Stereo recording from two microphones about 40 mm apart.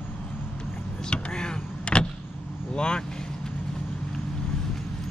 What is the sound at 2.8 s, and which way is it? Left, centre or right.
Vehicle, left.